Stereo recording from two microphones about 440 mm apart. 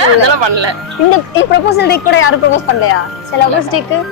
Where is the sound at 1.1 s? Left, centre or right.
Left.